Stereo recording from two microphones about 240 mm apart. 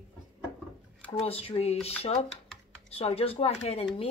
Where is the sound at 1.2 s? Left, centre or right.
Left.